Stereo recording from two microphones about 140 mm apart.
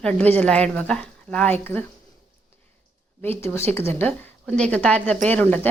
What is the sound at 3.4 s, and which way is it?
Speech, 20° left (ahead or behind).